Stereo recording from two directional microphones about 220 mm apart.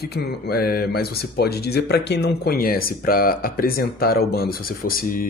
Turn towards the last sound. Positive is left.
turn(degrees=40)  # may be behind; listen again after turning